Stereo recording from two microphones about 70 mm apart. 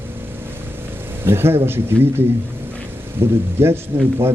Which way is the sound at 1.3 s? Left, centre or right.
Right.